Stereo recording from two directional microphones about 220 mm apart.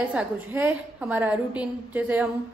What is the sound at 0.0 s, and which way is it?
A woman's voice, 5° right (ahead or behind).